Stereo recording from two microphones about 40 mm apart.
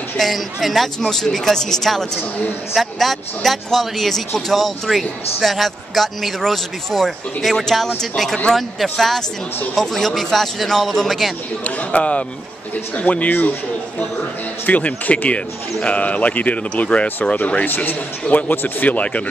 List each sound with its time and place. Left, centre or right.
0.2 s speech: centre
1.0 s speech: centre
11.6 s speech: left
14.7 s speech: left
17.6 s a man's voice: left